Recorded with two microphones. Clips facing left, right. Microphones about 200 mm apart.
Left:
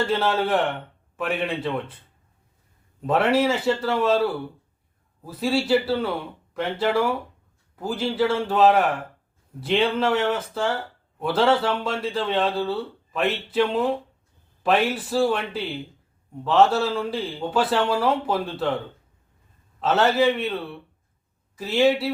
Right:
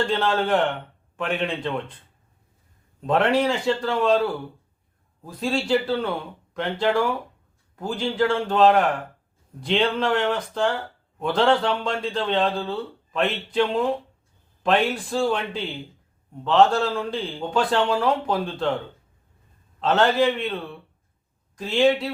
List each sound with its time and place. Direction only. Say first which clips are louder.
0.0 s a man's voice: even; 5° left (ahead or behind)
3.1 s a man's voice: even; 5° left (ahead or behind)
19.8 s speech: even; 5° left (ahead or behind)